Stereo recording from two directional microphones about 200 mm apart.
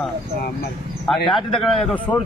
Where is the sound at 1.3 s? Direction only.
Centre (ahead or behind).